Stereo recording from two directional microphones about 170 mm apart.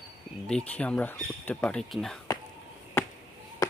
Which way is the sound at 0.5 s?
5° left (ahead or behind).